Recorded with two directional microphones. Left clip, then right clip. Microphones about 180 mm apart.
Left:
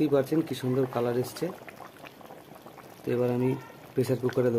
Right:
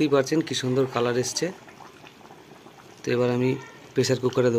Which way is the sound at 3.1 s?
5° right (ahead or behind).